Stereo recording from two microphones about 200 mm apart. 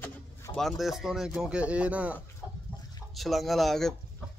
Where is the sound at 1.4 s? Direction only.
5° right (ahead or behind).